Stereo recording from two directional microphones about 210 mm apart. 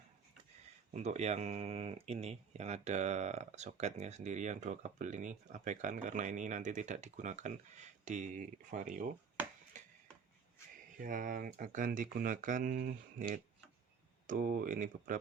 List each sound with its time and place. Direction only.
0.9 s speech: 30° right (ahead or behind)
9.7 s a sound: 35° right (ahead or behind)
10.9 s speech: 40° right (ahead or behind)